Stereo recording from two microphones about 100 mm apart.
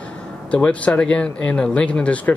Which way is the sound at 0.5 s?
10° left (ahead or behind).